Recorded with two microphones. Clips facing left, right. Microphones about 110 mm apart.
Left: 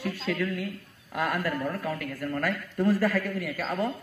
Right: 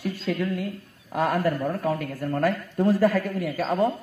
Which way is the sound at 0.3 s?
25° right (ahead or behind).